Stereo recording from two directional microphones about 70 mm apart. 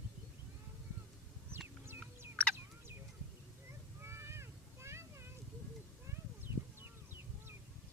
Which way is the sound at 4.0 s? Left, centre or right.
Right.